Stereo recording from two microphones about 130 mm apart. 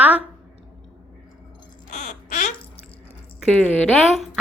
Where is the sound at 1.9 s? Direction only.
70° left (ahead or behind).